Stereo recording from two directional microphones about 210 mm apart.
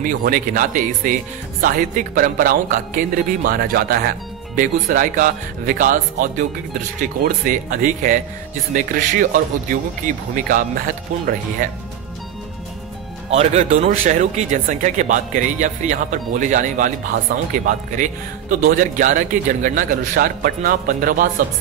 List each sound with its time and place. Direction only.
0.0 s speech: 40° right (ahead or behind)
13.3 s speech: 30° right (ahead or behind)